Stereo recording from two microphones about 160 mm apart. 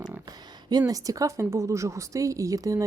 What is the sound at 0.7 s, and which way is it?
A woman's voice, 25° right (ahead or behind).